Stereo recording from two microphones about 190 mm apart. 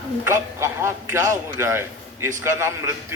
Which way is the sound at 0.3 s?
15° right (ahead or behind).